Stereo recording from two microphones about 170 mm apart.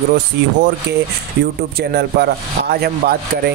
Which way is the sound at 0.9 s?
80° right.